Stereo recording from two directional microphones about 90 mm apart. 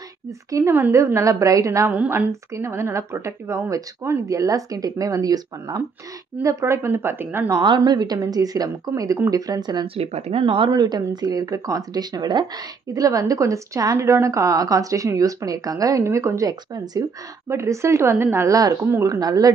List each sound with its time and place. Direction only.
0.5 s a woman's voice: 35° right (ahead or behind)
7.6 s a woman's voice: 55° right (ahead or behind)
9.9 s speech: 90° right
10.7 s a woman's voice: 45° right (ahead or behind)
12.9 s speech: 40° right (ahead or behind)
17.5 s a woman's voice: 30° right (ahead or behind)